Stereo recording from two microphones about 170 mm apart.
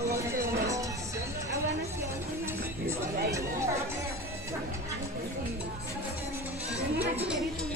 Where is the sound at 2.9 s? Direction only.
15° right (ahead or behind).